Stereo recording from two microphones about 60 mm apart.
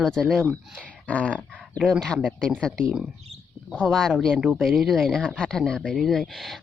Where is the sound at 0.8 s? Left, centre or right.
Left.